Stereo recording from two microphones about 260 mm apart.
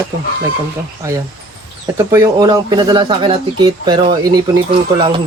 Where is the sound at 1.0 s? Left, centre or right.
Centre.